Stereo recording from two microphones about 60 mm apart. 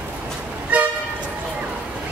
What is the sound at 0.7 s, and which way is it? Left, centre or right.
Vehicle, right.